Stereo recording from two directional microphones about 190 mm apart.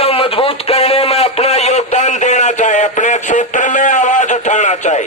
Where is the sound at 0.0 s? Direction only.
30° left (ahead or behind).